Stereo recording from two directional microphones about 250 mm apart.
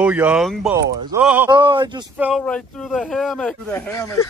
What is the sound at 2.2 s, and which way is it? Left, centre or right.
Speech, centre.